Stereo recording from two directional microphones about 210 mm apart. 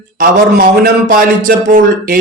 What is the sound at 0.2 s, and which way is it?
A man's voice, 45° right (ahead or behind).